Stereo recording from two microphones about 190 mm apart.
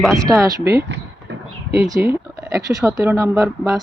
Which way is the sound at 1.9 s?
15° right (ahead or behind).